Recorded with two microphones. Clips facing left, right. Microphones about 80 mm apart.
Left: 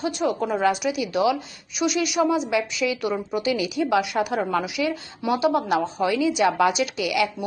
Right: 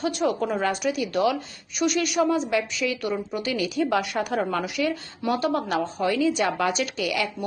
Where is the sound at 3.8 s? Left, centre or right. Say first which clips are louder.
Left 3 dB; centre.